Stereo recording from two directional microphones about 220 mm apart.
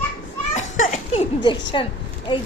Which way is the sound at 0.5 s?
35° left (ahead or behind).